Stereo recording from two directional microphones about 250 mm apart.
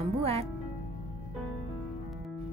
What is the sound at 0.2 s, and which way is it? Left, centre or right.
Music, right.